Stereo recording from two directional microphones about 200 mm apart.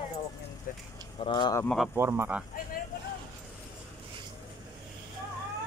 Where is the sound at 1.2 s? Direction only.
25° left (ahead or behind).